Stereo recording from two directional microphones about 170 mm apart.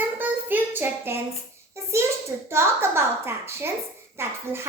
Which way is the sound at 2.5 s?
15° right (ahead or behind).